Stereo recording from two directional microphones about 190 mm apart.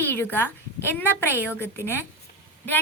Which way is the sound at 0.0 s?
10° left (ahead or behind).